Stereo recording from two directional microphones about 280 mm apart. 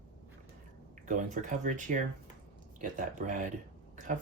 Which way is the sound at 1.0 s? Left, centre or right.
Right.